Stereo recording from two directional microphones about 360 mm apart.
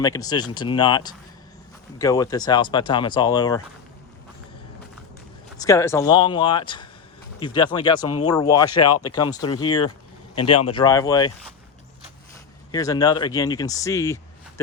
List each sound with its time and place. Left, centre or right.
0.0 s speech: centre
5.5 s speech: centre
8.0 s speech: left
8.3 s speech: centre
8.8 s speech: left
9.0 s speech: centre
12.7 s speech: centre